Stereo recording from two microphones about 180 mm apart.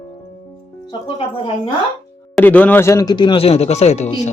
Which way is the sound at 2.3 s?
10° left (ahead or behind).